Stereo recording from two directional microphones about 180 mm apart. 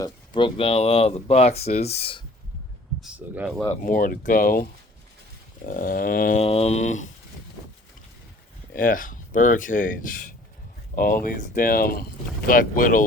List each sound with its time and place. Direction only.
0.0 s speech: 30° left (ahead or behind)
3.0 s speech: 10° right (ahead or behind)
3.7 s speech: 45° left (ahead or behind)
5.6 s speech: 50° left (ahead or behind)
6.4 s speech: 35° left (ahead or behind)
8.7 s speech: 50° left (ahead or behind)